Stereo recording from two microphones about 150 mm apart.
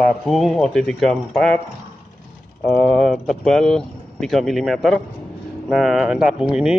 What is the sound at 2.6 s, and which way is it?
Speech, 5° left (ahead or behind).